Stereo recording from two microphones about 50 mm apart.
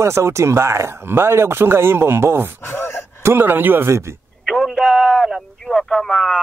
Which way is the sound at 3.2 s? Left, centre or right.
Right.